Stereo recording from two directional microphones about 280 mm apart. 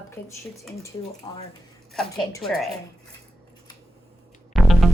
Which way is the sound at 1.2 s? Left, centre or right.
Centre.